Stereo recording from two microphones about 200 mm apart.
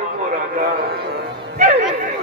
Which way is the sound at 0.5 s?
50° right (ahead or behind).